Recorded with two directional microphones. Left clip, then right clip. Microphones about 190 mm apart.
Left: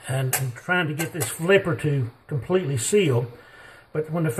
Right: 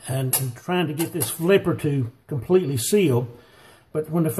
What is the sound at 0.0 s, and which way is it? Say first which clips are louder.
Speech: left 1 dB; 35° right (ahead or behind).